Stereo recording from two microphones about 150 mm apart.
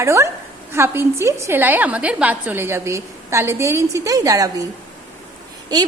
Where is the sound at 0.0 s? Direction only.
20° right (ahead or behind).